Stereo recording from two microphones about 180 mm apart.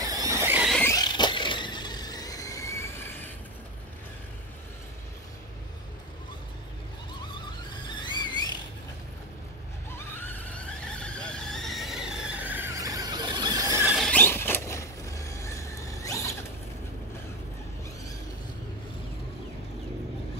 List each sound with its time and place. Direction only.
0.0 s squeal: 20° right (ahead or behind)
0.7 s rodents: 5° left (ahead or behind)
0.9 s vehicle: 25° left (ahead or behind)
8.0 s a sound: 25° left (ahead or behind)
10.1 s neigh: 10° left (ahead or behind); by 13.8 s 20° right (ahead or behind)
13.8 s squeal: centre (ahead or behind); by 16.3 s 15° left (ahead or behind)